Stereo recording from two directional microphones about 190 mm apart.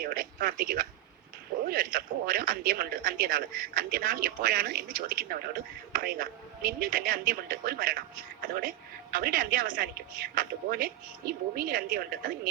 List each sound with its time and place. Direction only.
0.0 s speech: 50° right (ahead or behind)